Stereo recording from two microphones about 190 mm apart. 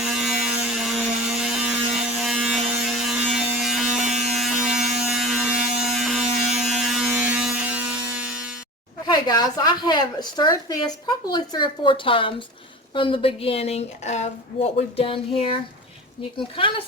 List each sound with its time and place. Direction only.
0.0 s a sound: centre (ahead or behind)
9.0 s speech: 20° left (ahead or behind)
16.6 s speech: 25° left (ahead or behind)